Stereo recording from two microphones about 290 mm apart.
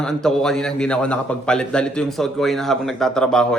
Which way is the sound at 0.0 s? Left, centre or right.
Centre.